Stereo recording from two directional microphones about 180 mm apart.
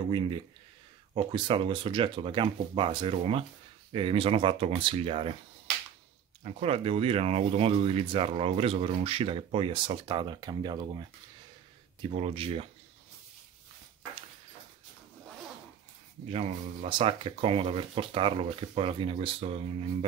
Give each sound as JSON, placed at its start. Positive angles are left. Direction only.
{"t": 1.1, "sound": "speech", "side_deg": -30}
{"t": 6.4, "sound": "speech", "side_deg": -35}
{"t": 12.1, "sound": "speech", "side_deg": -35}
{"t": 16.3, "sound": "speech", "side_deg": -35}